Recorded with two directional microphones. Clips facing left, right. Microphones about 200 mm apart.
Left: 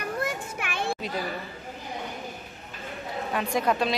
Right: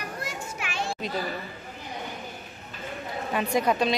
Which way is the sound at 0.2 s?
55° left (ahead or behind).